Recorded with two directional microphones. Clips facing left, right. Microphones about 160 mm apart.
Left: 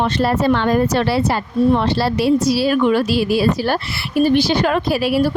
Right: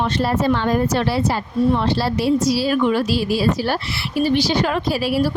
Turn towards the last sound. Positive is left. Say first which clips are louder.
# left 3 dB
turn(degrees=60)  # may be behind; listen again after turning